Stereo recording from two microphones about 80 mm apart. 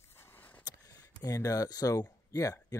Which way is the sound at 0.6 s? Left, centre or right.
Left.